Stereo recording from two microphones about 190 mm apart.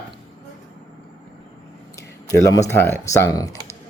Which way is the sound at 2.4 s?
15° left (ahead or behind).